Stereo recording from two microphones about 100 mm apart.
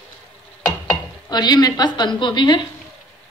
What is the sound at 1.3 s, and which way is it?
A woman's voice, 45° left (ahead or behind).